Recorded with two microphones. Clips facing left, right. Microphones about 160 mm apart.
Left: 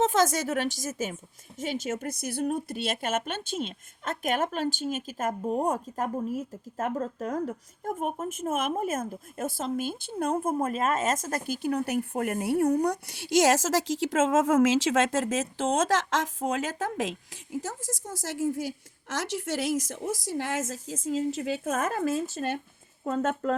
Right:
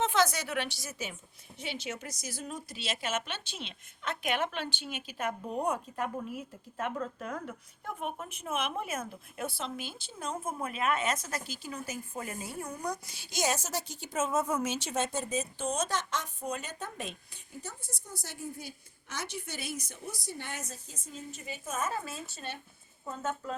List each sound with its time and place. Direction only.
0.0 s a woman's voice: 45° left (ahead or behind)
23.0 s speech: 70° left (ahead or behind)